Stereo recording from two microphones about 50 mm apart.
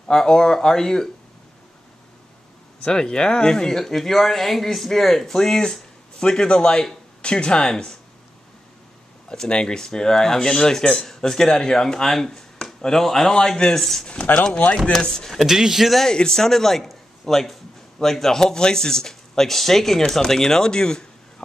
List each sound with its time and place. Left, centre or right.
0.1 s speech: centre
2.8 s speech: centre
9.3 s speech: centre
14.3 s speech: left
14.9 s speech: centre
15.4 s speech: centre
16.1 s speech: centre